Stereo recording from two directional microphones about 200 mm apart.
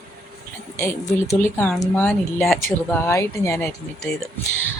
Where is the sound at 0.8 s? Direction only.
15° left (ahead or behind).